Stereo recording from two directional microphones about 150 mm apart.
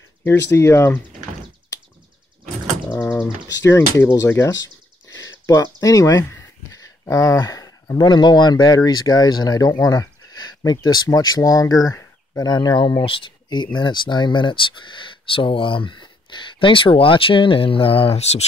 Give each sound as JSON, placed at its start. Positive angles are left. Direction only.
{"t": 0.2, "sound": "speech", "side_deg": 15}
{"t": 2.9, "sound": "mechanisms", "side_deg": 15}
{"t": 3.6, "sound": "speech", "side_deg": 20}